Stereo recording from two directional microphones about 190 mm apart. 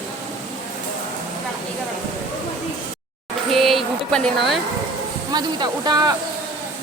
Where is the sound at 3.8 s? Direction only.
Centre (ahead or behind).